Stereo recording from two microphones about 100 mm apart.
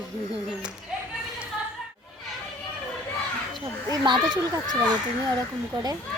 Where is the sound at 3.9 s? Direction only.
40° right (ahead or behind).